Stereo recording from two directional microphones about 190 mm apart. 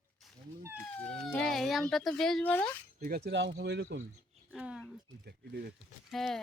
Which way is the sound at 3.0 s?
55° right (ahead or behind).